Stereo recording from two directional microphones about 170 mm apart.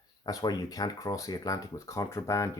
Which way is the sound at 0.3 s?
20° left (ahead or behind).